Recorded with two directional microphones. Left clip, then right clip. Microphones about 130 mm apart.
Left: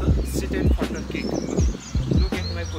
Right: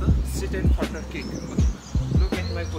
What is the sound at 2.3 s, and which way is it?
Music, centre (ahead or behind).